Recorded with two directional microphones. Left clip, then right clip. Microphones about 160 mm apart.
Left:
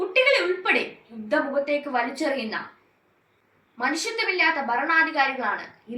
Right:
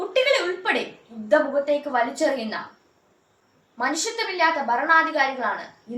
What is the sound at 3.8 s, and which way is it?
A woman's voice, 25° right (ahead or behind).